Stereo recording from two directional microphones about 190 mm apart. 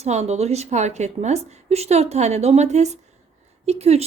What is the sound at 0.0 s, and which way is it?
A woman's voice, 35° right (ahead or behind).